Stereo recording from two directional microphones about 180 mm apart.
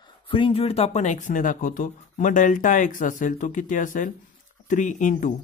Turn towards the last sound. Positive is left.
turn(degrees=45)  # may be behind; listen again after turning